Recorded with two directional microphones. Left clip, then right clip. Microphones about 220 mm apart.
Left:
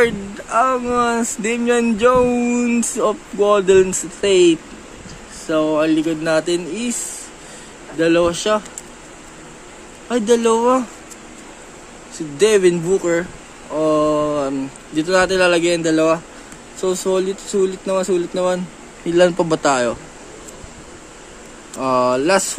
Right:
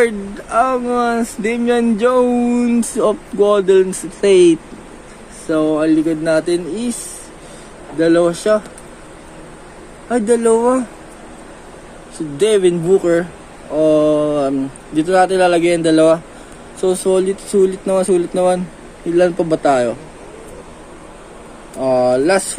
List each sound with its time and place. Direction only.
0.0 s speech: 5° left (ahead or behind)
5.5 s speech: 5° left (ahead or behind)
8.0 s speech: 5° left (ahead or behind)
10.0 s speech: 10° left (ahead or behind)
12.4 s speech: 5° left (ahead or behind)
19.1 s speech: 20° left (ahead or behind)
21.9 s speech: 15° left (ahead or behind)